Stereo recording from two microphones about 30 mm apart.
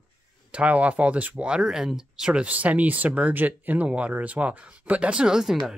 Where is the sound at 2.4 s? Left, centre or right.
Right.